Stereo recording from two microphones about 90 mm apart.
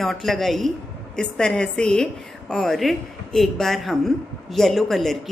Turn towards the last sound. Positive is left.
turn(degrees=5)  # may be behind; listen again after turning